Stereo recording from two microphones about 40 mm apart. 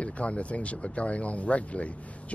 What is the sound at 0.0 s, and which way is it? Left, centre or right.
Speech, left.